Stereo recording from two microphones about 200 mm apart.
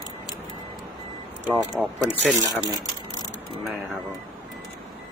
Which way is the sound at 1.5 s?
Centre (ahead or behind).